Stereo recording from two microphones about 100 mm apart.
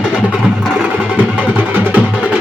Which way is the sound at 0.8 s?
15° right (ahead or behind).